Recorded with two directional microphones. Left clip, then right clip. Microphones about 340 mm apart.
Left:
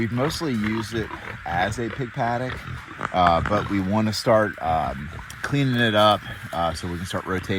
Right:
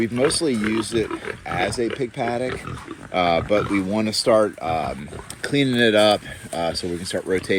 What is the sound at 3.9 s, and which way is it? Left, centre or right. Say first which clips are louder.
Speech: right 1 dB; left.